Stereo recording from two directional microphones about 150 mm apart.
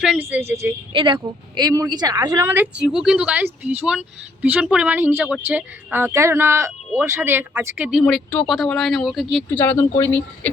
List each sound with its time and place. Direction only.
0.0 s a woman's voice: 10° right (ahead or behind)
0.9 s speech: 35° right (ahead or behind)
1.2 s speech: 25° right (ahead or behind)
2.5 s a woman's voice: 10° right (ahead or behind)
8.0 s speech: 5° left (ahead or behind)
9.5 s speech: 15° left (ahead or behind)